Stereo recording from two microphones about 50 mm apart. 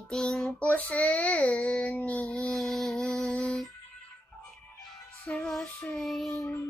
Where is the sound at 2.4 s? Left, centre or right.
Centre.